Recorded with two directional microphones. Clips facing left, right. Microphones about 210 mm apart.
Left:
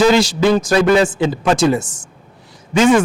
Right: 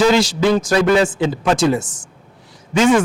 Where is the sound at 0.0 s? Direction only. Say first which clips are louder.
Left 2 dB; 5° left (ahead or behind).